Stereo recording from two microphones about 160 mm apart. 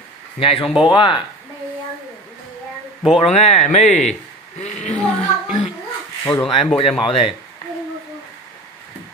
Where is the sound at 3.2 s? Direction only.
45° left (ahead or behind).